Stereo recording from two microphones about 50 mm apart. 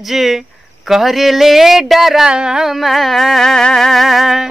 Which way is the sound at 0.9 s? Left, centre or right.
Centre.